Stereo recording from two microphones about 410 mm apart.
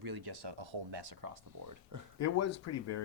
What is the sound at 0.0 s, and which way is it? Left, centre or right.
Speech, right.